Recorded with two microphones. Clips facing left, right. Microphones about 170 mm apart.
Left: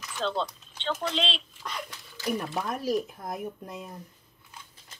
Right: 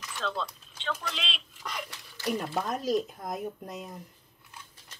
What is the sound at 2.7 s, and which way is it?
Speech, 20° right (ahead or behind).